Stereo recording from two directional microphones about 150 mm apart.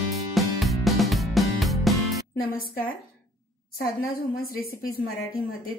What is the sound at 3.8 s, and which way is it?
A woman's voice, 85° left.